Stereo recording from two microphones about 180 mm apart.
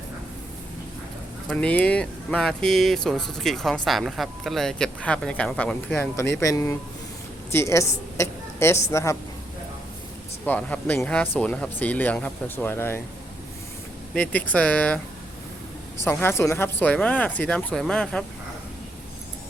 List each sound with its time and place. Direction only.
1.5 s a woman's voice: 5° left (ahead or behind)
10.4 s speech: 10° left (ahead or behind)
14.2 s speech: 10° left (ahead or behind)
16.0 s speech: 15° left (ahead or behind)